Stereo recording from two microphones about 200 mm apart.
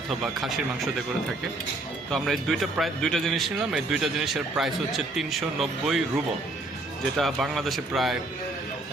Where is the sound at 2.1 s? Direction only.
Centre (ahead or behind).